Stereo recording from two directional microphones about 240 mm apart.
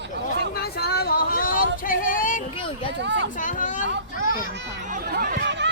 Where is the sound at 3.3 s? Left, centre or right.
Left.